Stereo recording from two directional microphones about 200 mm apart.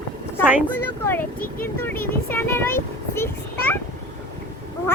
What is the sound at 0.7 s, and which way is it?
Speech, 10° left (ahead or behind).